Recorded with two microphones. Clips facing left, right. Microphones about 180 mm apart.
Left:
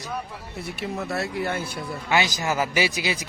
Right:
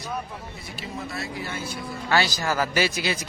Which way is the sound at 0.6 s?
65° left (ahead or behind).